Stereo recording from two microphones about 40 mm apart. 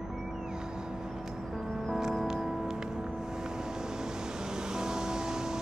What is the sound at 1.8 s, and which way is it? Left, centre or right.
Music, centre.